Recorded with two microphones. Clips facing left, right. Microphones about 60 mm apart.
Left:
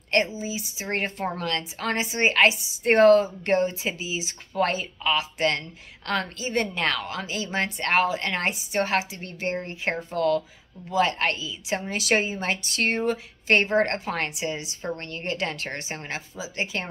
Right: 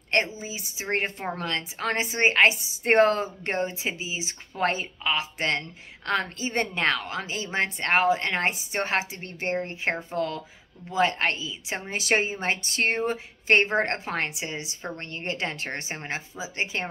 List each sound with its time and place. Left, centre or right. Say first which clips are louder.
0.4 s speech: left 4 dB; right
0.8 s speech: even; right